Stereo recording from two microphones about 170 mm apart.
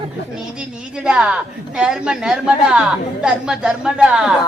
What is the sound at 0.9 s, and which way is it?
A woman's voice, 5° right (ahead or behind).